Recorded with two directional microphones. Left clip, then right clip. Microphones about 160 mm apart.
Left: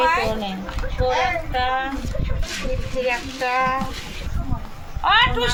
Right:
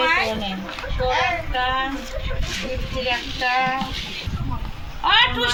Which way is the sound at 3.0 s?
10° right (ahead or behind).